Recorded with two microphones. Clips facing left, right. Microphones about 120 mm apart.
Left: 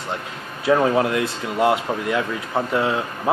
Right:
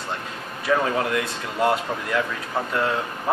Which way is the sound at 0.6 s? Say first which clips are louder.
Left 5 dB; 25° left (ahead or behind).